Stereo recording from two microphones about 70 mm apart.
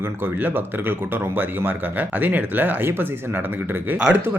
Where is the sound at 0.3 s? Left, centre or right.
Right.